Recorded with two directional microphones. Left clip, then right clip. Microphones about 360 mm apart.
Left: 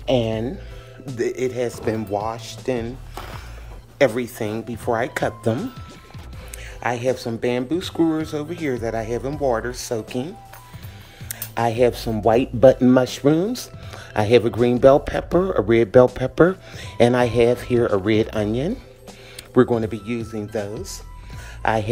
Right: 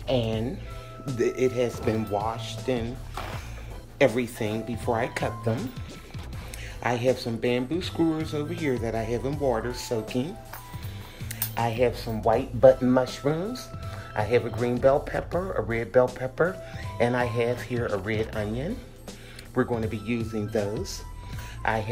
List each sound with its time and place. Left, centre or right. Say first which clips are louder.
0.0 s speech: left 6 dB; left
1.0 s speech: left 1 dB; centre
4.0 s speech: left 4 dB; centre
6.8 s speech: left 3 dB; centre